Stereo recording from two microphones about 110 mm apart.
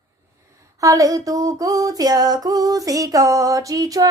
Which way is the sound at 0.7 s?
30° right (ahead or behind).